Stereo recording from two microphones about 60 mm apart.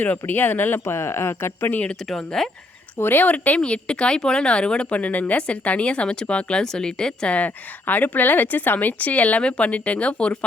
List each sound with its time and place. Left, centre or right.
0.0 s speech: left
1.7 s speech: left
2.0 s speech: centre
3.0 s speech: left; by 10.3 s centre